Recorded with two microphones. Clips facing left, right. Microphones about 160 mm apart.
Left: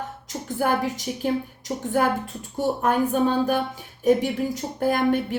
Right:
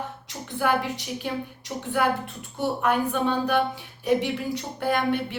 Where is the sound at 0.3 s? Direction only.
45° left (ahead or behind).